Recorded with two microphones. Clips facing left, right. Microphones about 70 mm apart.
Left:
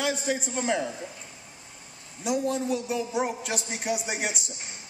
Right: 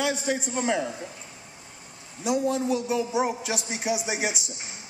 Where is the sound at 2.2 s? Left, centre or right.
Centre.